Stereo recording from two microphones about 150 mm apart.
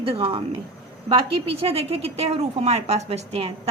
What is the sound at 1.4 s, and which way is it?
A woman's voice, 40° right (ahead or behind).